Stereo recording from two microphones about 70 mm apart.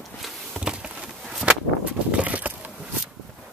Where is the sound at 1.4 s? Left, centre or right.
Centre.